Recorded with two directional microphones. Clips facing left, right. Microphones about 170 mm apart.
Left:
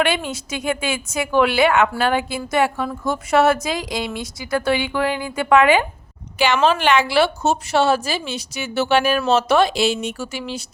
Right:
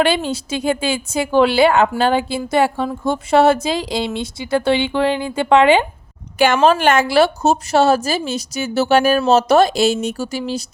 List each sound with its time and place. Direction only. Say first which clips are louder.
0.0 s a woman's voice: right 4 dB; 30° right (ahead or behind)
6.6 s a woman's voice: right 2 dB; 45° right (ahead or behind)